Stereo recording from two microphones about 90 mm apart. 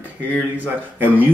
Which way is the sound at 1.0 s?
20° right (ahead or behind).